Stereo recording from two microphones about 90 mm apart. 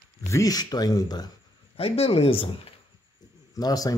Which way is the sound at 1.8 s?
90° left.